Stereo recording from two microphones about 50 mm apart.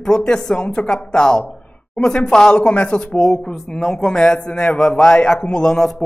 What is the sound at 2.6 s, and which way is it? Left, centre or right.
Speech, left.